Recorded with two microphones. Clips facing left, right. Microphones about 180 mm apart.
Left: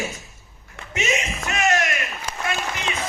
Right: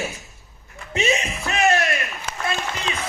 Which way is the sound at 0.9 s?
35° right (ahead or behind).